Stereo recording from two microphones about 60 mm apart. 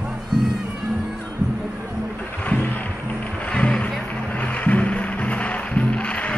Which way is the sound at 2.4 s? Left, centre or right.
Left.